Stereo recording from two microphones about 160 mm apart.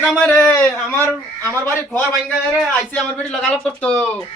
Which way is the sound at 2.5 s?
Centre (ahead or behind).